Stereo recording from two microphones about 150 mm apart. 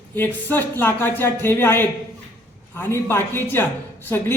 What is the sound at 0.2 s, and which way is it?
A man's voice, 15° left (ahead or behind).